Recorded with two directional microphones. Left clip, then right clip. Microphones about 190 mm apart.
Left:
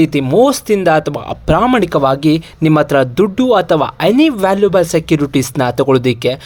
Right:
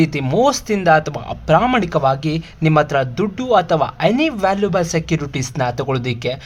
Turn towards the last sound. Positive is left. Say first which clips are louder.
# left 9 dB
turn(degrees=30)  # may be behind; listen again after turning